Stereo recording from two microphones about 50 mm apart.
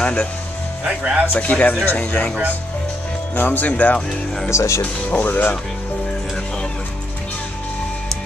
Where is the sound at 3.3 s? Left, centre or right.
Left.